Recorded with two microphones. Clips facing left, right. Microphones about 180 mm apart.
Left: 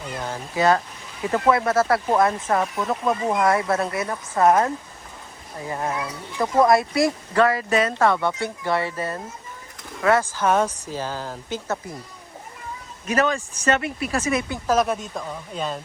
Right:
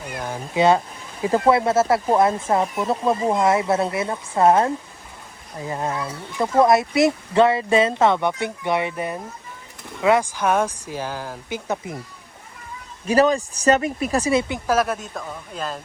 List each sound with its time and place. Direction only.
0.1 s speech: 10° right (ahead or behind)
0.5 s speech: 25° right (ahead or behind)
13.1 s speech: 35° right (ahead or behind)
14.7 s speech: 5° right (ahead or behind)